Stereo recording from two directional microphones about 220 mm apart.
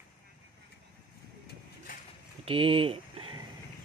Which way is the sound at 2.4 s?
25° right (ahead or behind).